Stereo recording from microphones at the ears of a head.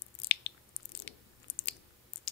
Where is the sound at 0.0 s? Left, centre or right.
Left.